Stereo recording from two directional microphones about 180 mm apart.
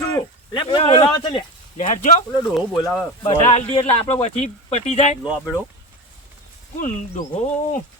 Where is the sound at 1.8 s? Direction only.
45° left (ahead or behind).